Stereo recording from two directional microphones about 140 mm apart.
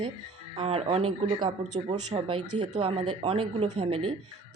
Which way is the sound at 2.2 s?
40° right (ahead or behind).